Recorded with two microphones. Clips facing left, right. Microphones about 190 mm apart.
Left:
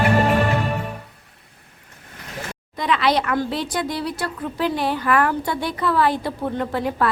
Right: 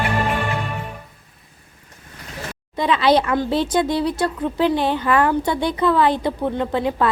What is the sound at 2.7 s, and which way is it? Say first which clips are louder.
Speech: right 4 dB; 25° right (ahead or behind).